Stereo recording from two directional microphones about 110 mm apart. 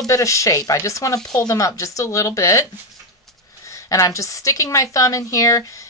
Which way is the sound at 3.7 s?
30° left (ahead or behind).